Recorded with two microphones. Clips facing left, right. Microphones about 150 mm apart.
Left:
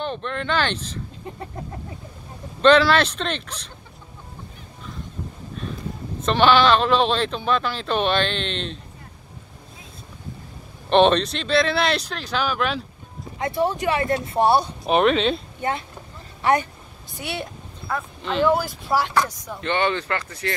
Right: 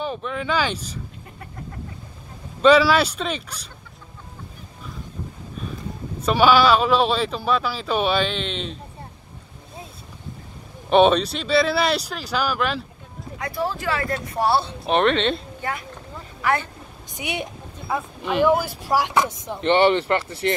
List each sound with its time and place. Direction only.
0.0 s speech: 5° right (ahead or behind)
2.6 s speech: 5° right (ahead or behind)
6.2 s speech: 10° right (ahead or behind)
10.9 s speech: 5° right (ahead or behind)
13.4 s speech: 20° left (ahead or behind)
14.9 s speech: 5° left (ahead or behind)
15.6 s speech: 20° left (ahead or behind)
17.1 s speech: 15° right (ahead or behind)